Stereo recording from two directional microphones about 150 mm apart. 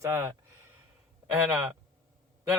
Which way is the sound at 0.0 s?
20° right (ahead or behind).